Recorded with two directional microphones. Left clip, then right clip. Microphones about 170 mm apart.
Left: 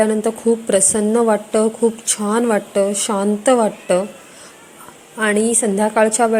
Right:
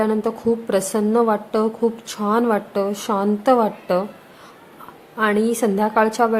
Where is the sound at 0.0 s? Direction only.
15° left (ahead or behind).